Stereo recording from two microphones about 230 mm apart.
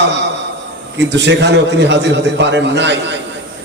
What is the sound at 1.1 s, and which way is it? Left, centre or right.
A man's voice, right.